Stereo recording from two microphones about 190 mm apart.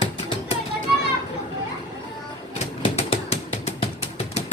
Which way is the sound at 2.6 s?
30° left (ahead or behind).